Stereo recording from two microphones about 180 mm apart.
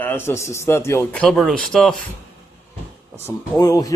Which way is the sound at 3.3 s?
20° left (ahead or behind).